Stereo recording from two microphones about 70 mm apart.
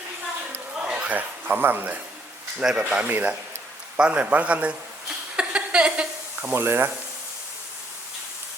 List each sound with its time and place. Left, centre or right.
0.8 s speech: centre
2.6 s speech: centre
5.0 s a sound: centre
6.5 s speech: right